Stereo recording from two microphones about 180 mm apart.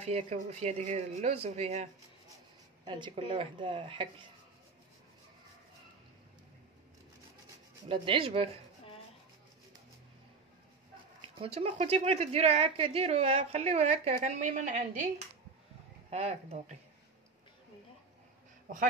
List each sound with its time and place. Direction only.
0.1 s a woman's voice: 40° right (ahead or behind)
7.9 s speech: 30° right (ahead or behind)
11.4 s a woman's voice: 35° right (ahead or behind)
16.1 s a woman's voice: 35° right (ahead or behind)